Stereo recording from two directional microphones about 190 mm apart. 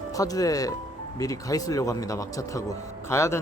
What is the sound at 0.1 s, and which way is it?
Speech, 20° left (ahead or behind).